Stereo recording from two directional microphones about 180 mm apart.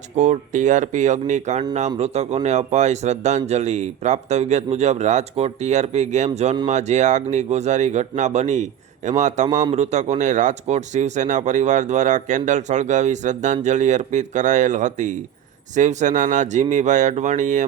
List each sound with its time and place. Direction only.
0.2 s speech: 40° right (ahead or behind)